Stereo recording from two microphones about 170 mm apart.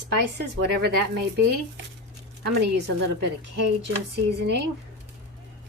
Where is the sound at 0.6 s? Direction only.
80° right.